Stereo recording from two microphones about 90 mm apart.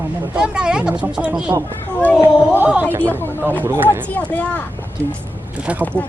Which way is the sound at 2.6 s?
20° right (ahead or behind).